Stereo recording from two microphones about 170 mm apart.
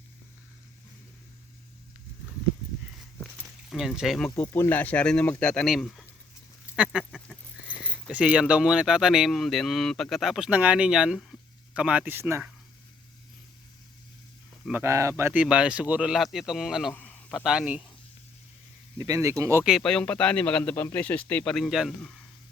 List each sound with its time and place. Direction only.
3.7 s speech: 5° right (ahead or behind)
4.4 s speech: 10° left (ahead or behind)
6.7 s a sound: 5° right (ahead or behind)
7.8 s speech: 5° right (ahead or behind)
14.6 s a man's voice: 10° right (ahead or behind)
18.9 s speech: 20° right (ahead or behind)
19.6 s speech: centre (ahead or behind)